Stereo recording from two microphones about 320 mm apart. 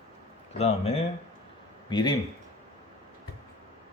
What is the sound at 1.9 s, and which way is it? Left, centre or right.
Speech, centre.